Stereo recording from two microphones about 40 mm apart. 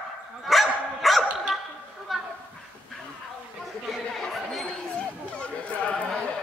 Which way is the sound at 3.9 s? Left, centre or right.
Centre.